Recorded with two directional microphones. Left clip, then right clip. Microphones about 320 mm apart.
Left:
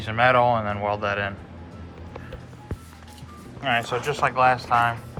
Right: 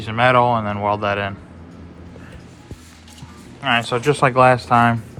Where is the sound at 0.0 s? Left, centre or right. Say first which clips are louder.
Right 4 dB; centre.